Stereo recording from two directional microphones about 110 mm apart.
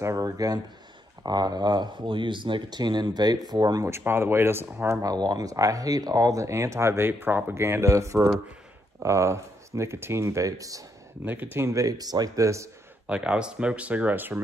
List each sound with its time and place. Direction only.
0.0 s a sound: 30° right (ahead or behind)
1.2 s speech: 40° right (ahead or behind)
3.9 s speech: 20° right (ahead or behind)
5.1 s speech: 35° right (ahead or behind)
11.2 s speech: 20° right (ahead or behind)
13.0 s speech: 10° right (ahead or behind)